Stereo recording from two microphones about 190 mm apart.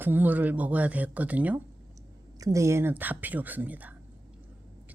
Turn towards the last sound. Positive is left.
turn(degrees=-10)  # may be behind; listen again after turning